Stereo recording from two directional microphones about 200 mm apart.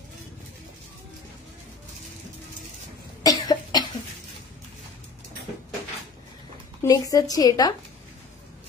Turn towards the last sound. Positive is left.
turn(degrees=20)  # may be behind; listen again after turning